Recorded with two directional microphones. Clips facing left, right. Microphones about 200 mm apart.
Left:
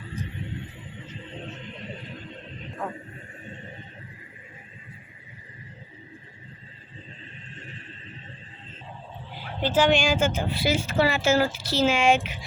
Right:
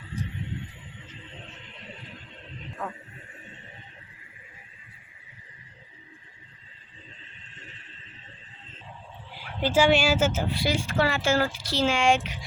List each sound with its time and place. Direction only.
9.3 s dog: 40° left (ahead or behind)
9.6 s speech: 10° right (ahead or behind)
10.5 s speech: 5° left (ahead or behind)